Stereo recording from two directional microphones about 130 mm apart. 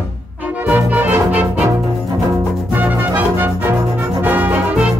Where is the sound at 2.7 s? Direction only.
15° right (ahead or behind).